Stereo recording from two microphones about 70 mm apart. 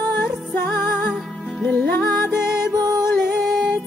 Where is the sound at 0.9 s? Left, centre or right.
Centre.